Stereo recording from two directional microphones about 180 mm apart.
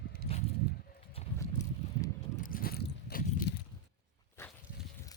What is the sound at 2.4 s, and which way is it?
Biting, 55° left (ahead or behind).